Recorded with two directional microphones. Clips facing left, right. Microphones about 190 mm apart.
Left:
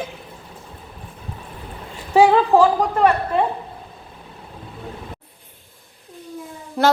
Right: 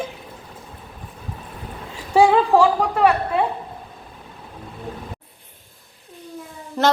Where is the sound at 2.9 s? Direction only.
10° right (ahead or behind).